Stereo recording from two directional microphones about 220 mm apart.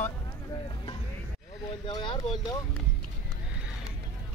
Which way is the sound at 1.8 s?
20° left (ahead or behind).